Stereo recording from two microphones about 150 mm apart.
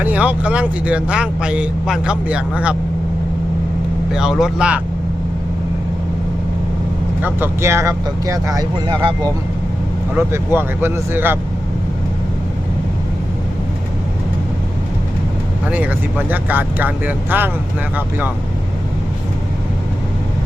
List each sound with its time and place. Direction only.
0.0 s speech: 10° right (ahead or behind)
4.1 s speech: 5° right (ahead or behind)
7.2 s speech: 15° right (ahead or behind)
10.2 s speech: 15° right (ahead or behind)
15.6 s speech: 10° right (ahead or behind)